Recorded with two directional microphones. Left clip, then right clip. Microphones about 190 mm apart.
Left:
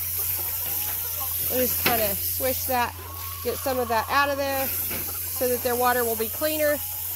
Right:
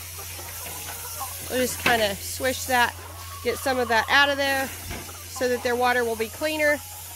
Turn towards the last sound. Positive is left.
turn(degrees=-5)  # may be behind; listen again after turning